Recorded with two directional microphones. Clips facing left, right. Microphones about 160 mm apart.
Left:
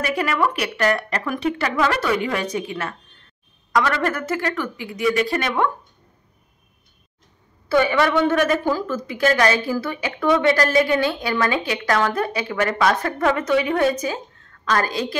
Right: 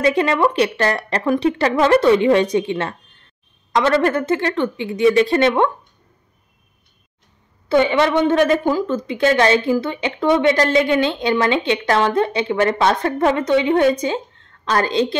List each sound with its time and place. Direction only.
0.0 s a woman's voice: 25° right (ahead or behind)
7.6 s a woman's voice: 20° right (ahead or behind)